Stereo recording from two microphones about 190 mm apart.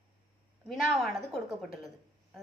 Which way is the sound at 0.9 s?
Centre (ahead or behind).